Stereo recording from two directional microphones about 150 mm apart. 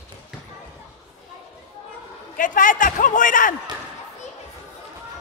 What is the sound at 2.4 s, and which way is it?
A man's voice, 60° left (ahead or behind).